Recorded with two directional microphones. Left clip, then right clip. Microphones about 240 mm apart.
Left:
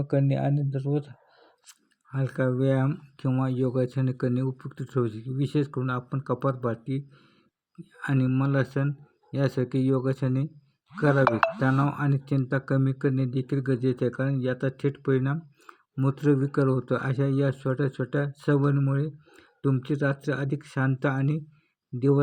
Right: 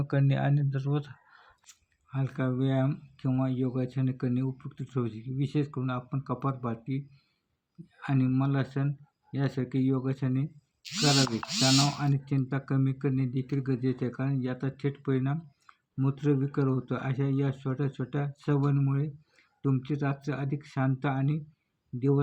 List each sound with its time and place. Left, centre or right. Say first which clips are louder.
0.0 s speech: left 4 dB; centre
1.6 s speech: left 3 dB; centre
11.8 s speech: left 1 dB; centre